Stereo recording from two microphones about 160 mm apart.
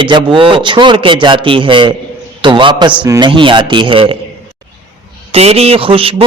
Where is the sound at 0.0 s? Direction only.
30° right (ahead or behind).